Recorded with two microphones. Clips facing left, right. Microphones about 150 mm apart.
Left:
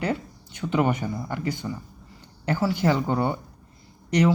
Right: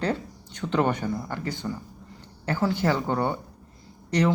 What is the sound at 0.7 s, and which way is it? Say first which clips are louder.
Speech: left 1 dB; 10° left (ahead or behind).